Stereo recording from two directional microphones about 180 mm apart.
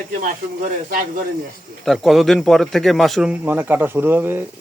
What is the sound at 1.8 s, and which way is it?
Speech, centre (ahead or behind).